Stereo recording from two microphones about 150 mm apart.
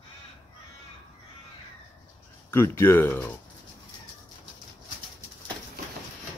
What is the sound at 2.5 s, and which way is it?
Speech, 15° left (ahead or behind).